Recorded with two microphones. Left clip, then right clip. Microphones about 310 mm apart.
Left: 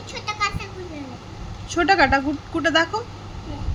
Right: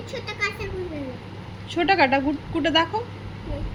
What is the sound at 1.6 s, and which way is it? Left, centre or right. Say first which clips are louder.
A woman's voice: left 2 dB; centre.